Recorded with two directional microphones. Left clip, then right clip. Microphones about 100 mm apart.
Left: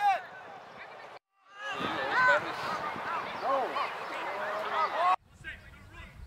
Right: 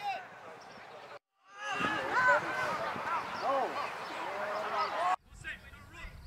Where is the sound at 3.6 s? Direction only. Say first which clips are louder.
Left 3 dB; 30° left (ahead or behind).